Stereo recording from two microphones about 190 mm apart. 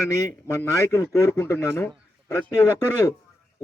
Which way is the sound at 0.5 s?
15° left (ahead or behind).